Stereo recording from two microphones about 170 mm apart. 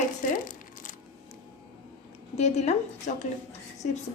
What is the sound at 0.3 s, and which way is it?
Crumpling, 50° left (ahead or behind).